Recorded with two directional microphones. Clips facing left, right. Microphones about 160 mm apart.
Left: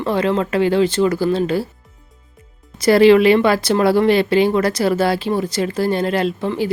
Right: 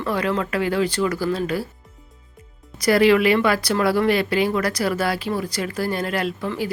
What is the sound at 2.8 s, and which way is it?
Speech, 30° left (ahead or behind).